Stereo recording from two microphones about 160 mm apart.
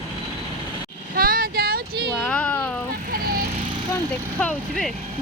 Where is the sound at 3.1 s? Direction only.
65° right (ahead or behind).